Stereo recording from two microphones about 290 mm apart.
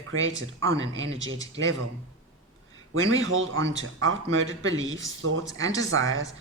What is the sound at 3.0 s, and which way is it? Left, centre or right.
Speech, right.